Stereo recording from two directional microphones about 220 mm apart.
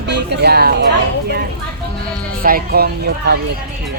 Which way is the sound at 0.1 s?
50° right (ahead or behind).